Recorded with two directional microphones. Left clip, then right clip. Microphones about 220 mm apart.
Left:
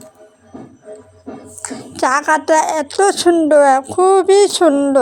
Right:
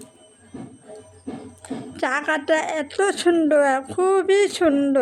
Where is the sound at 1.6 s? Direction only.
15° left (ahead or behind).